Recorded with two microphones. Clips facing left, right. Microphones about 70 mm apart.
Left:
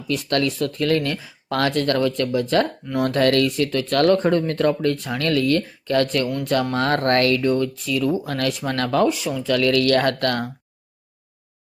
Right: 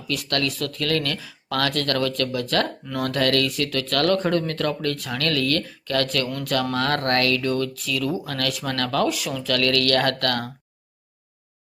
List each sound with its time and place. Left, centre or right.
0.1 s speech: left